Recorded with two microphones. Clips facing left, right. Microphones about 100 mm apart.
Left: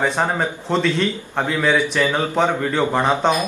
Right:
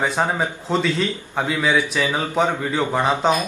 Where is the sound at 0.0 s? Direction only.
5° right (ahead or behind).